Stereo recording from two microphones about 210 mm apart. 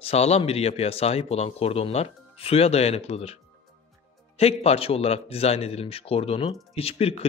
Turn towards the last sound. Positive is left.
turn(degrees=30)  # may be behind; listen again after turning